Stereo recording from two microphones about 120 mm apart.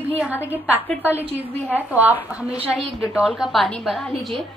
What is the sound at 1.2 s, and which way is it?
A woman's voice, 15° right (ahead or behind).